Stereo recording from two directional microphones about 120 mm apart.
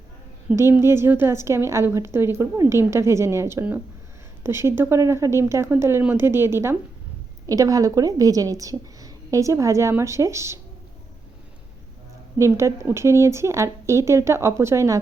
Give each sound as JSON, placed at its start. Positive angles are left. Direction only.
{"t": 0.5, "sound": "a woman's voice", "side_deg": -20}
{"t": 12.4, "sound": "a woman's voice", "side_deg": -25}